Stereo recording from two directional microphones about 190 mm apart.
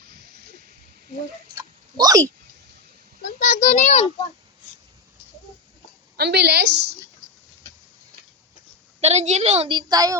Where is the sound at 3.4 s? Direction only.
45° left (ahead or behind).